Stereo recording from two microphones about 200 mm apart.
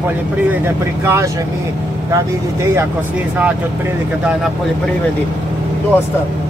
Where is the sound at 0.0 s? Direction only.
10° right (ahead or behind).